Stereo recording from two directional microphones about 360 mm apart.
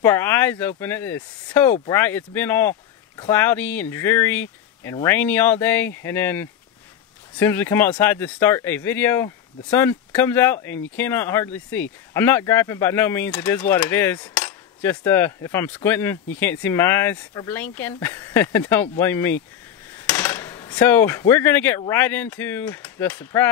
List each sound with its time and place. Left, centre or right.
0.0 s speech: centre